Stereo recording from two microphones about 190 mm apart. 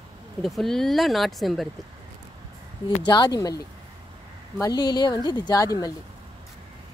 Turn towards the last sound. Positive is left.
turn(degrees=20)  # may be behind; listen again after turning